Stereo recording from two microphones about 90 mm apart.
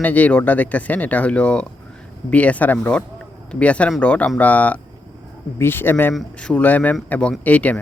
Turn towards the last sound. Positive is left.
turn(degrees=15)  # may be behind; listen again after turning